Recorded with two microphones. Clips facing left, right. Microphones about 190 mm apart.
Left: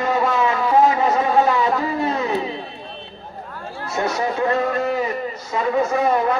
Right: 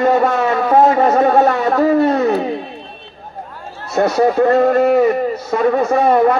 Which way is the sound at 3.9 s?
65° right (ahead or behind).